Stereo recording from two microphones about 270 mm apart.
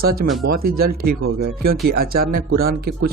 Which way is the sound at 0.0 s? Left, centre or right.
Right.